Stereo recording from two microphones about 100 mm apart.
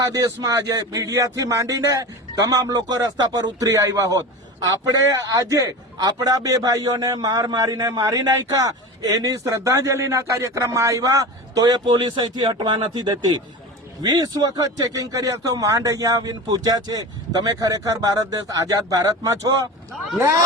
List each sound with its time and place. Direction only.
0.0 s a man's voice: 35° right (ahead or behind)